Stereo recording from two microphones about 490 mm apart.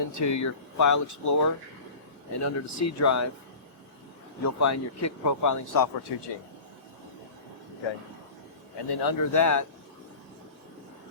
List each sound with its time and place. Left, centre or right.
0.1 s speech: left
4.4 s speech: left
8.9 s speech: left